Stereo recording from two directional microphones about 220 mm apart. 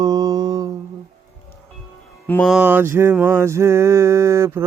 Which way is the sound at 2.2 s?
10° left (ahead or behind).